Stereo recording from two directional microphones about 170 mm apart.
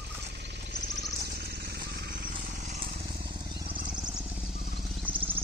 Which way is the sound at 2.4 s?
50° right (ahead or behind).